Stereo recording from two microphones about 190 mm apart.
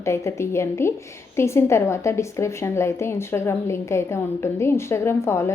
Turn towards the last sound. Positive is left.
turn(degrees=15)  # may be behind; listen again after turning